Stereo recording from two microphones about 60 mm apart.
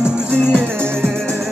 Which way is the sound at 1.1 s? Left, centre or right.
Centre.